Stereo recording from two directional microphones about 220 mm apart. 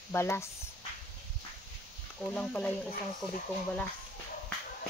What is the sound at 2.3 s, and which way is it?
Speech, 5° left (ahead or behind).